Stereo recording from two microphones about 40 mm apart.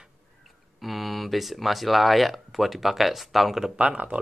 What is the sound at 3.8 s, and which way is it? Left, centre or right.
Speech, right.